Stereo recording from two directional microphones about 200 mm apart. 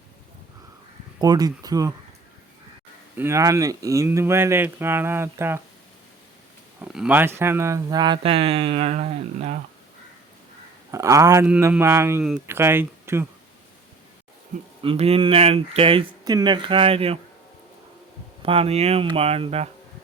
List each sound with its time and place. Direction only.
1.2 s speech: 20° right (ahead or behind)
3.2 s speech: 15° right (ahead or behind)
6.8 s speech: 5° right (ahead or behind); by 9.6 s 30° right (ahead or behind)
10.9 s speech: 15° right (ahead or behind)
14.8 s speech: 30° right (ahead or behind)
18.4 s speech: 30° right (ahead or behind)